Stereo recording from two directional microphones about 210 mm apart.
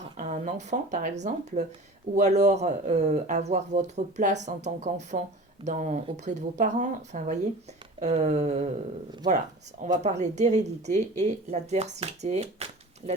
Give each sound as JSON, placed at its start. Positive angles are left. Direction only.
{"t": 0.0, "sound": "a sound", "side_deg": -35}
{"t": 1.2, "sound": "speech", "side_deg": -35}
{"t": 9.8, "sound": "speech", "side_deg": -35}